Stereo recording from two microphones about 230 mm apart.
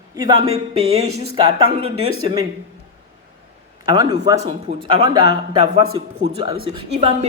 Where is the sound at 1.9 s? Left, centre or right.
Right.